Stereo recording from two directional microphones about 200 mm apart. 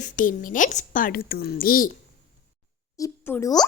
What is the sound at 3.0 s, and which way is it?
Speech, 15° left (ahead or behind).